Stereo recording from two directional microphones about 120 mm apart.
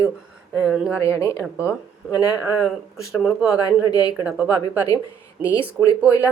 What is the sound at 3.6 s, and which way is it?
Speech, 35° left (ahead or behind).